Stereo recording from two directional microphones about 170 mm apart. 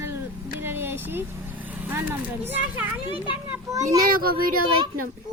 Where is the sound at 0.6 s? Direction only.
15° right (ahead or behind).